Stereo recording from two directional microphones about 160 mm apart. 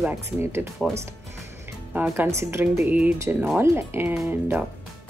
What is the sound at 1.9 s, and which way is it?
Speech, 10° right (ahead or behind).